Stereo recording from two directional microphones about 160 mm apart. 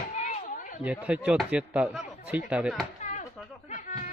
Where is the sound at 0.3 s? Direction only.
50° left (ahead or behind).